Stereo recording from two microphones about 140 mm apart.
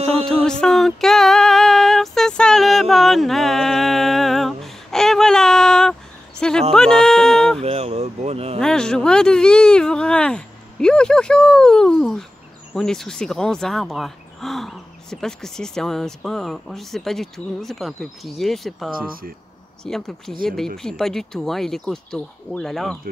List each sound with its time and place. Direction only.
0.5 s female singing: 5° left (ahead or behind)
6.7 s speech: 5° left (ahead or behind)
7.6 s speech: 45° right (ahead or behind)
8.5 s speech: 5° left (ahead or behind)